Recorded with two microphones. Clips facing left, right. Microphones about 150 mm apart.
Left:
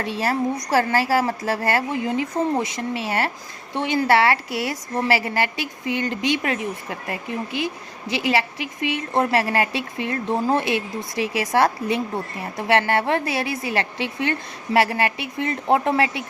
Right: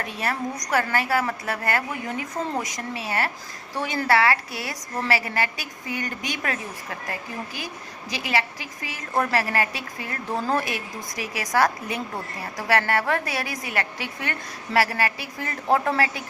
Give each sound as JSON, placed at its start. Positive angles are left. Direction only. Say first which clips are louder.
{"t": 0.0, "sound": "speech", "louder": "left 5 dB", "side_deg": 30}